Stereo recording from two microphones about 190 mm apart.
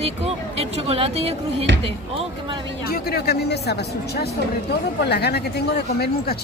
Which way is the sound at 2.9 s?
55° left (ahead or behind).